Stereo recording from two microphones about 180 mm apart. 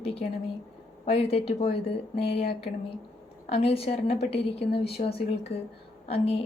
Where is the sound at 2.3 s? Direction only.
65° left (ahead or behind).